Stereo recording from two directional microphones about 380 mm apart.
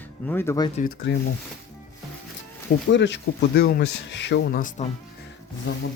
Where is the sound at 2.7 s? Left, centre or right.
Left.